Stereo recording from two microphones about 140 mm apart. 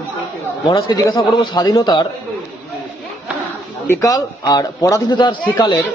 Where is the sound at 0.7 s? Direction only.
30° left (ahead or behind).